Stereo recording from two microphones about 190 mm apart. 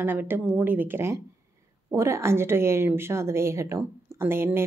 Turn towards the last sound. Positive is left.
turn(degrees=-10)  # may be behind; listen again after turning